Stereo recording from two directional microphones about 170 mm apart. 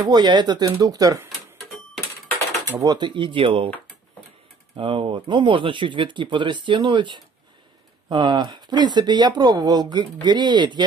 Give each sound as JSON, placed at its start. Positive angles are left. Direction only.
{"t": 0.1, "sound": "speech", "side_deg": -25}
{"t": 2.6, "sound": "speech", "side_deg": -20}
{"t": 4.7, "sound": "speech", "side_deg": -30}